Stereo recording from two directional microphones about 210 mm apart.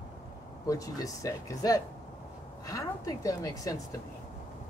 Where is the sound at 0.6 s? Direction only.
15° left (ahead or behind).